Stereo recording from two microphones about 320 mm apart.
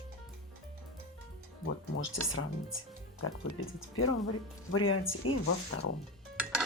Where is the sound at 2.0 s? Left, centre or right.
Left.